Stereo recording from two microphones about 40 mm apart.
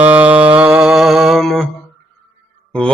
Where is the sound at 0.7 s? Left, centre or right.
Right.